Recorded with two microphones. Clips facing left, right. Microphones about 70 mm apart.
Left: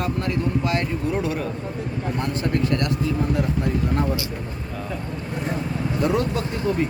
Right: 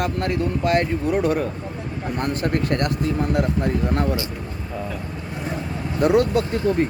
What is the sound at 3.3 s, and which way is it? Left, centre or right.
Speech, right.